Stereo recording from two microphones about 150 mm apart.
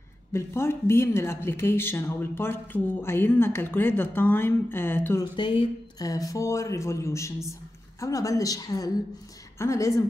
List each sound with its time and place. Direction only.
0.3 s speech: 15° left (ahead or behind)
5.2 s speech: 30° left (ahead or behind)